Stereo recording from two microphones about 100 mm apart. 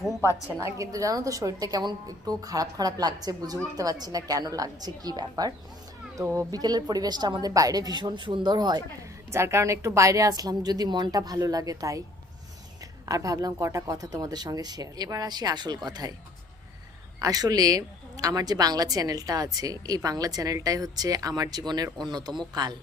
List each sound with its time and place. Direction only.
0.6 s a woman's voice: 35° right (ahead or behind)
9.3 s a woman's voice: 25° right (ahead or behind)
13.1 s a woman's voice: 35° right (ahead or behind)
17.2 s a woman's voice: 40° right (ahead or behind)